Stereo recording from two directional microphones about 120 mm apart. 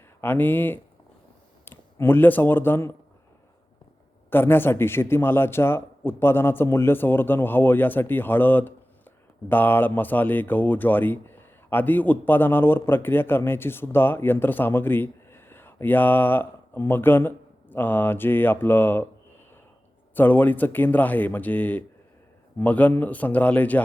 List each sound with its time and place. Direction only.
0.2 s speech: 15° left (ahead or behind)
4.3 s a man's voice: 20° left (ahead or behind)
20.1 s speech: 15° left (ahead or behind)